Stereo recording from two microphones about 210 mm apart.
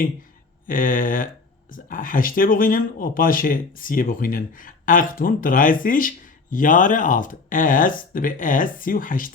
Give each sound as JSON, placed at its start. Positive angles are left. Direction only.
{"t": 0.7, "sound": "speech", "side_deg": 40}